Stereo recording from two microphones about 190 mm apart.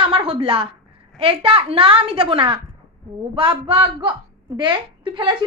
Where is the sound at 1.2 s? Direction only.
30° right (ahead or behind).